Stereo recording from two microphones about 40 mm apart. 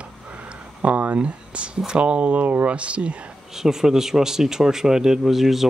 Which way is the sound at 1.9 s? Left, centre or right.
Right.